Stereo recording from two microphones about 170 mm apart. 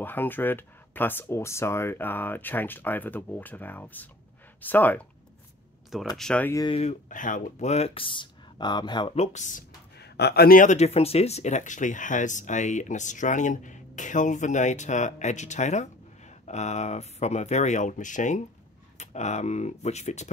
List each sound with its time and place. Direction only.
0.0 s speech: 10° left (ahead or behind)
6.1 s speech: 5° left (ahead or behind)
6.5 s speech: 25° left (ahead or behind)
6.8 s speech: 45° left (ahead or behind)
9.9 s speech: 75° left (ahead or behind); by 20.2 s 40° left (ahead or behind)